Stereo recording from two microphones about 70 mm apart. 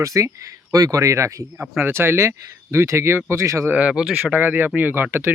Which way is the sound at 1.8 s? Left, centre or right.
Right.